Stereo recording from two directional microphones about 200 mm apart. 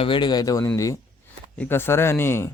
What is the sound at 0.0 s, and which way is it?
Speech, 25° left (ahead or behind).